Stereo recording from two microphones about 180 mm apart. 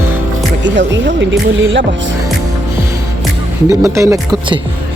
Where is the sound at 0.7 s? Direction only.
85° right.